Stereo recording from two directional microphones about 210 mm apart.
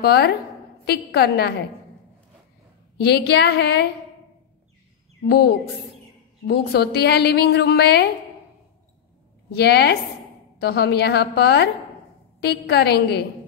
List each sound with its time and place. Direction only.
0.0 s a woman's voice: 50° left (ahead or behind)
3.0 s a woman's voice: 50° left (ahead or behind)
5.2 s a woman's voice: 50° left (ahead or behind)
9.6 s a woman's voice: 50° left (ahead or behind)